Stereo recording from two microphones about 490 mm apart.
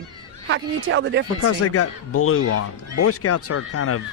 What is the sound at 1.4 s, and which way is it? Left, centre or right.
Speech, left.